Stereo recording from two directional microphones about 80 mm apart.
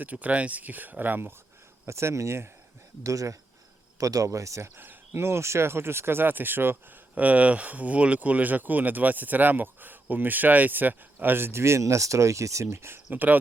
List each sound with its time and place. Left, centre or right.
0.0 s speech: centre
1.9 s speech: right
4.8 s speech: right
13.1 s speech: right